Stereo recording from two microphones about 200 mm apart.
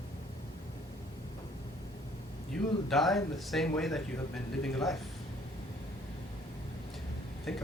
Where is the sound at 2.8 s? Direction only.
Centre (ahead or behind).